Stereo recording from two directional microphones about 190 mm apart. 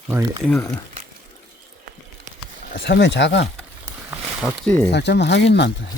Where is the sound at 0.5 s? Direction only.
15° left (ahead or behind).